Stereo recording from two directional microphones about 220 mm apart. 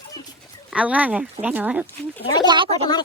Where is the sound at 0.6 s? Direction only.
5° right (ahead or behind).